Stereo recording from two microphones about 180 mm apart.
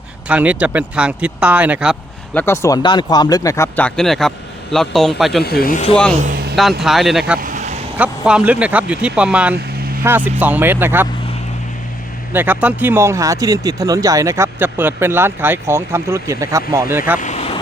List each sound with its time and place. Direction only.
0.3 s speech: 5° right (ahead or behind)
2.3 s a man's voice: 10° left (ahead or behind)
5.4 s speech: 60° left (ahead or behind)
6.2 s a sound: 60° right (ahead or behind)
6.8 s a man's voice: centre (ahead or behind)
7.3 s vehicle: 50° right (ahead or behind)
7.9 s speech: 5° right (ahead or behind)
12.3 s speech: 10° right (ahead or behind)
17.2 s vehicle: 40° left (ahead or behind)